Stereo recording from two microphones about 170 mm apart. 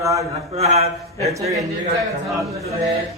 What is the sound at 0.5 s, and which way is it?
Speech, 40° right (ahead or behind).